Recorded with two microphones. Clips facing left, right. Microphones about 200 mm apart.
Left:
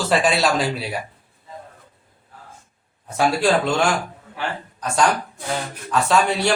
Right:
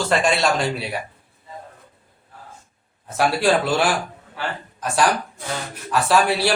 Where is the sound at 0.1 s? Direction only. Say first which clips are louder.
Left 2 dB; 5° left (ahead or behind).